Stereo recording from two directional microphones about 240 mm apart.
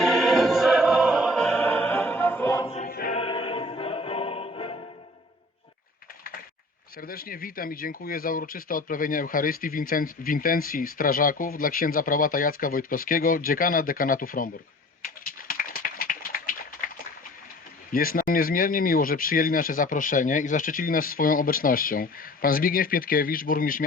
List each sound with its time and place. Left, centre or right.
0.0 s music: centre
2.6 s choir: left
2.9 s music: left
3.2 s music: left
7.0 s speech: left
15.0 s a sound: left
17.9 s speech: left